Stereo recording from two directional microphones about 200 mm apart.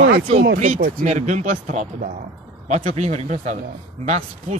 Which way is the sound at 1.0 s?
35° right (ahead or behind).